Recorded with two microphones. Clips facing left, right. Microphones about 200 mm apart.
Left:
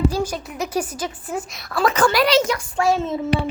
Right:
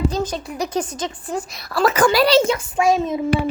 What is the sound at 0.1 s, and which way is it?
A woman's voice, 10° left (ahead or behind).